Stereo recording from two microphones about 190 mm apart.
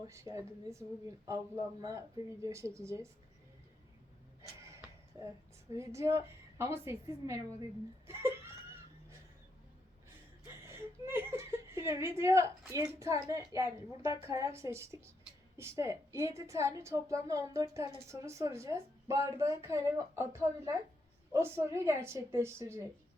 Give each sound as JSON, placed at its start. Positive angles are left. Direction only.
{"t": 0.1, "sound": "a woman's voice", "side_deg": -15}
{"t": 5.7, "sound": "a woman's voice", "side_deg": -15}
{"t": 10.4, "sound": "chuckle", "side_deg": -15}
{"t": 13.5, "sound": "a woman's voice", "side_deg": -15}